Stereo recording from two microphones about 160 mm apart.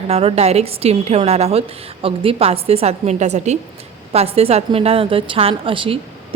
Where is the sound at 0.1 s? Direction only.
40° right (ahead or behind).